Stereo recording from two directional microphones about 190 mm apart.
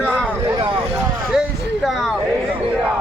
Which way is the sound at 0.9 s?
5° right (ahead or behind).